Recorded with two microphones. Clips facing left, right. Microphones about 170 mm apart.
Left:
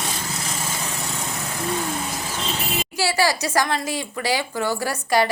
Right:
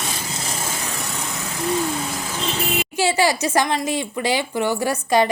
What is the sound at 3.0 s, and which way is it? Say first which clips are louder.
Speech: right 2 dB; 20° right (ahead or behind).